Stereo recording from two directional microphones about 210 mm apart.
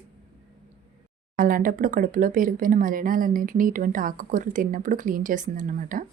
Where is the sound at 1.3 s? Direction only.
40° right (ahead or behind).